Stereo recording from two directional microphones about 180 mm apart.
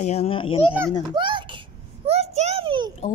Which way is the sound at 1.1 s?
25° right (ahead or behind).